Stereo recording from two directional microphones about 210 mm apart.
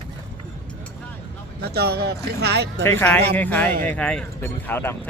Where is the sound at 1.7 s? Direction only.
50° right (ahead or behind).